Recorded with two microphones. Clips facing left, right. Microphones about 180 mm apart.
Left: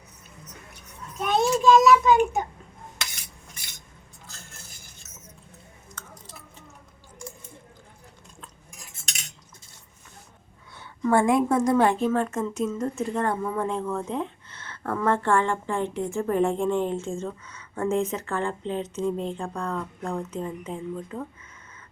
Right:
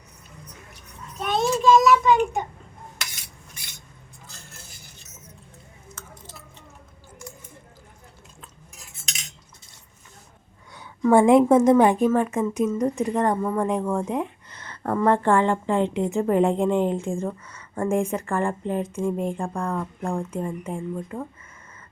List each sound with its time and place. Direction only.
1.2 s child singing: centre (ahead or behind)
11.1 s speech: 20° right (ahead or behind)